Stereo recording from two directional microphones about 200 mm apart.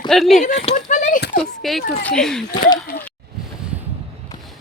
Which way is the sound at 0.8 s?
40° left (ahead or behind).